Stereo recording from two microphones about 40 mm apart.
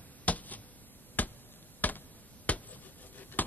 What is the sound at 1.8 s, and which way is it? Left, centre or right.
Chop, left.